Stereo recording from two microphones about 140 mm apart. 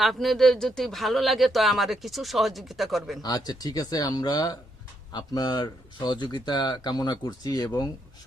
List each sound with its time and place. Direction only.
0.0 s speech: centre (ahead or behind)
3.2 s speech: 30° left (ahead or behind)